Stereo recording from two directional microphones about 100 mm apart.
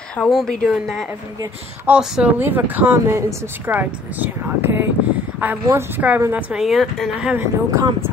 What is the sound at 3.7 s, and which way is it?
A woman's voice, 15° right (ahead or behind).